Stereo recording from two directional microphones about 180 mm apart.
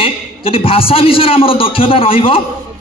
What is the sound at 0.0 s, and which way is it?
A man's voice, 30° left (ahead or behind).